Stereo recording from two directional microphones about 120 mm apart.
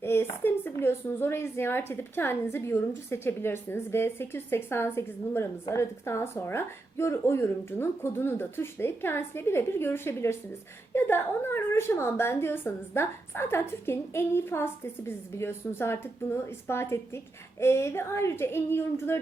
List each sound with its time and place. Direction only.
0.0 s speech: 20° left (ahead or behind)